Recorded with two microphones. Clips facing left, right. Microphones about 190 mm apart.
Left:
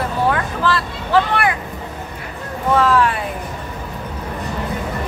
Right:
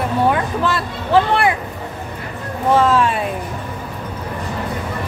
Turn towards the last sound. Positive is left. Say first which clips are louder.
# right 1 dB
turn(degrees=-25)  # may be behind; listen again after turning